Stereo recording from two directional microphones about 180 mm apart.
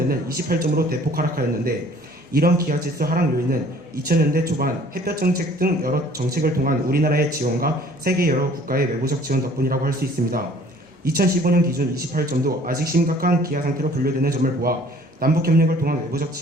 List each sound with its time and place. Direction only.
0.1 s speech: 55° right (ahead or behind)
11.0 s speech: 55° right (ahead or behind)